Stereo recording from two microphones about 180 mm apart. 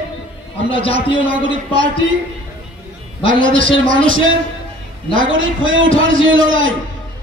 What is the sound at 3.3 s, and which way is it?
A man's voice, 90° right.